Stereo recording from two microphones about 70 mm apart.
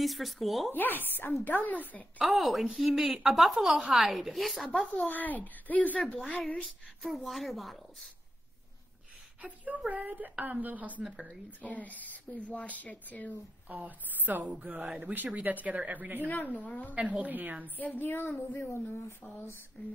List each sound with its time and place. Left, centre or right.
0.0 s a woman's voice: centre
0.7 s speech: left
2.2 s a woman's voice: centre
4.6 s speech: centre
6.6 s a woman's voice: centre
9.4 s speech: right
11.1 s speech: centre
11.6 s speech: left
13.7 s speech: right
16.3 s speech: left
16.9 s speech: centre
17.7 s speech: left